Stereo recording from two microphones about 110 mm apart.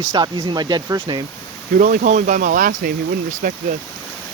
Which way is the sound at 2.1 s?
90° right.